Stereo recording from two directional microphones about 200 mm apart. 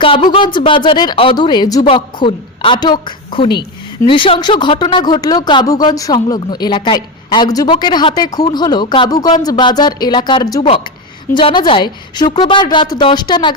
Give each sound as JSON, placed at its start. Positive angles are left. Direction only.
{"t": 0.0, "sound": "speech", "side_deg": 25}